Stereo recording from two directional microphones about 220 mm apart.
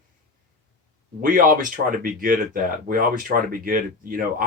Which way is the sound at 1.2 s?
40° right (ahead or behind).